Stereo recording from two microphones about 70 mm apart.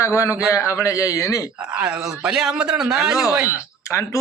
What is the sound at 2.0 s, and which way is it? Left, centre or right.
A man's voice, centre.